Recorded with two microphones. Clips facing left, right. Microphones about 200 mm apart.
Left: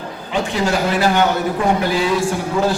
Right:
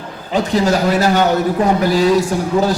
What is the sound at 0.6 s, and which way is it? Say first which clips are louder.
A man's voice: right 1 dB; 40° right (ahead or behind).